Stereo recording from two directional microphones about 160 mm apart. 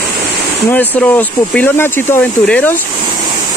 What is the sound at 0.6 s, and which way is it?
Speech, 10° left (ahead or behind).